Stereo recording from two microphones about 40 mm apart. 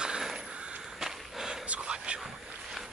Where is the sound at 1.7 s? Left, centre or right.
Right.